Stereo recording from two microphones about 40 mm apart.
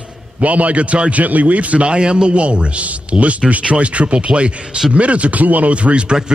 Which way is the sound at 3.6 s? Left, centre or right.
Right.